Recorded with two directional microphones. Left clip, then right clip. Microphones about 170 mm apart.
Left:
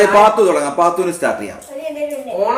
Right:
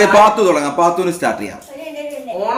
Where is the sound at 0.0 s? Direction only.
15° right (ahead or behind).